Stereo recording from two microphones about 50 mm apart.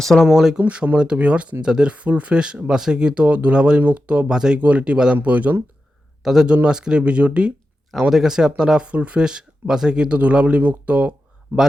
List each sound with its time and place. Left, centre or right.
0.0 s speech: centre
0.3 s speech: centre
0.6 s speech: right
4.6 s speech: right
6.2 s speech: centre
8.1 s speech: centre
10.2 s speech: right